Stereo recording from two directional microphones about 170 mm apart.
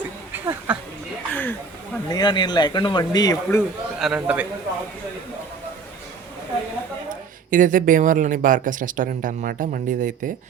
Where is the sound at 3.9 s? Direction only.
5° right (ahead or behind).